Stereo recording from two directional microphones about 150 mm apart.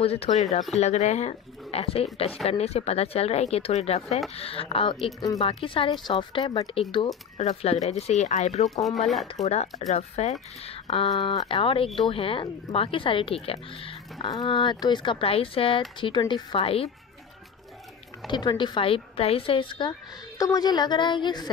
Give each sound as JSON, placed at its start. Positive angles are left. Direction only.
{"t": 0.0, "sound": "speech", "side_deg": 40}
{"t": 8.8, "sound": "speech", "side_deg": 0}
{"t": 9.4, "sound": "speech", "side_deg": 45}
{"t": 18.3, "sound": "a woman's voice", "side_deg": 30}